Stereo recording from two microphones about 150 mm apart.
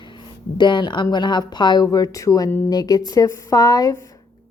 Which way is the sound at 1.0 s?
30° left (ahead or behind).